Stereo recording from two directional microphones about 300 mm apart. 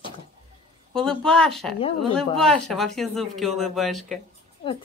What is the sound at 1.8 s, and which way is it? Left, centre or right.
Speech, centre.